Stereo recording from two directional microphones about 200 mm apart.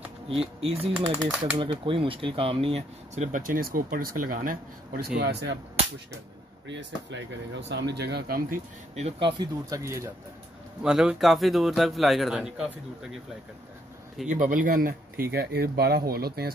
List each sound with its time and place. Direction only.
0.3 s speech: 30° right (ahead or behind)
1.1 s speech: 15° right (ahead or behind)
1.6 s speech: 25° right (ahead or behind); by 5.6 s 55° right (ahead or behind)
6.7 s speech: 65° right (ahead or behind)
8.9 s speech: 30° right (ahead or behind)
9.4 s speech: 15° right (ahead or behind)
10.8 s a man's voice: 5° right (ahead or behind)
14.2 s speech: 40° right (ahead or behind)